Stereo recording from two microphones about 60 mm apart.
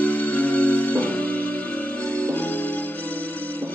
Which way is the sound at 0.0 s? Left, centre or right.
Left.